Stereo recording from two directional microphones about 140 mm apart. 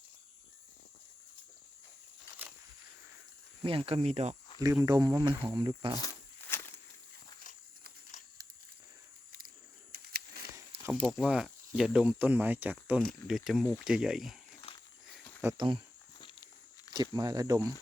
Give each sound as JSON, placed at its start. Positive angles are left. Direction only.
{"t": 3.6, "sound": "speech", "side_deg": -40}
{"t": 4.6, "sound": "speech", "side_deg": -25}
{"t": 6.0, "sound": "a sound", "side_deg": 20}
{"t": 8.1, "sound": "a sound", "side_deg": 60}
{"t": 9.9, "sound": "a sound", "side_deg": -90}
{"t": 11.0, "sound": "speech", "side_deg": -5}
{"t": 15.5, "sound": "speech", "side_deg": -40}
{"t": 16.1, "sound": "walk", "side_deg": 35}
{"t": 16.9, "sound": "speech", "side_deg": -30}